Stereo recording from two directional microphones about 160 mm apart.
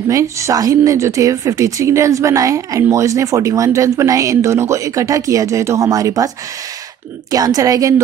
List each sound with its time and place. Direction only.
0.1 s speech: 20° right (ahead or behind)